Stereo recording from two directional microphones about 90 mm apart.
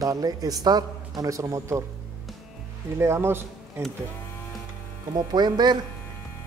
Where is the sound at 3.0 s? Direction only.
30° right (ahead or behind).